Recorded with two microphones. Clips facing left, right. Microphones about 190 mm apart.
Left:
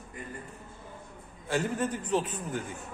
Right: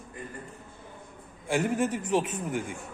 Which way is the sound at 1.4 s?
15° right (ahead or behind).